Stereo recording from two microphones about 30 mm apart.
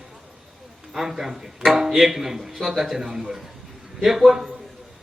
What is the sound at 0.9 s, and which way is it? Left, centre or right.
A man's voice, centre.